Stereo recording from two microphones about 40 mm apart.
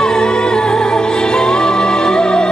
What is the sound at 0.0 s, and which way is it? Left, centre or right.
Music, centre.